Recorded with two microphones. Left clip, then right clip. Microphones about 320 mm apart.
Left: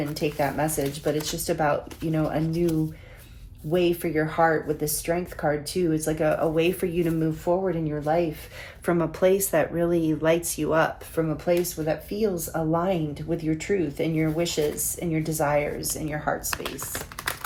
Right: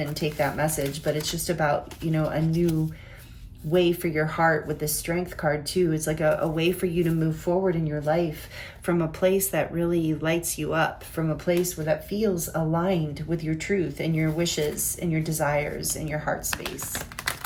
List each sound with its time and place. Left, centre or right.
0.1 s speech: centre
16.5 s speech: centre